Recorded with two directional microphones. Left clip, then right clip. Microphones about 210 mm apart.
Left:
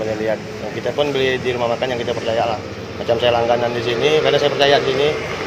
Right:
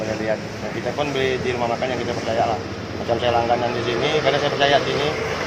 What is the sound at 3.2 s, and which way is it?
Speech, 45° left (ahead or behind).